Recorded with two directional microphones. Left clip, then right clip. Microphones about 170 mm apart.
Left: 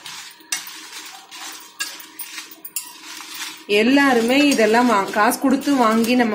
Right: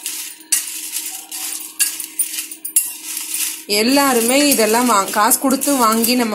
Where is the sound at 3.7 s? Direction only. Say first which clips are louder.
Even; 15° right (ahead or behind).